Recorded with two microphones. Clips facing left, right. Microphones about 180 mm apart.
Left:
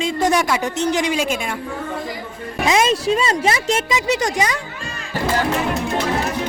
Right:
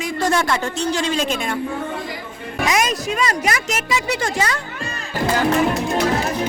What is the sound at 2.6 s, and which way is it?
Speech, 25° left (ahead or behind).